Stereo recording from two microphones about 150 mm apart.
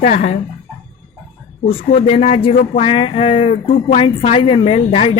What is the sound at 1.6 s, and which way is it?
Speech, 40° left (ahead or behind).